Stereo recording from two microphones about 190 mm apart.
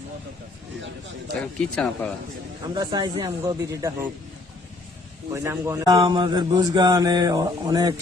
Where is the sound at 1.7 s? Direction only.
5° left (ahead or behind).